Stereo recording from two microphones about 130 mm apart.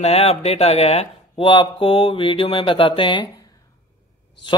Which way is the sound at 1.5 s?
40° left (ahead or behind).